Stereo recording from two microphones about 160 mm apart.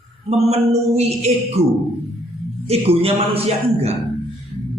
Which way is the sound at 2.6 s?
40° right (ahead or behind).